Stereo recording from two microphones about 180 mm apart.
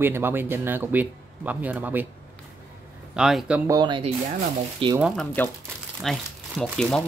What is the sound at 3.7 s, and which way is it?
Speech, 25° right (ahead or behind).